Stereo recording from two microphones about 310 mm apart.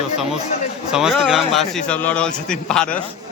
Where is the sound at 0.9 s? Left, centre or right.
Centre.